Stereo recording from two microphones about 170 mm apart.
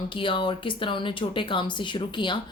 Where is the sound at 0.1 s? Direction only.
30° left (ahead or behind).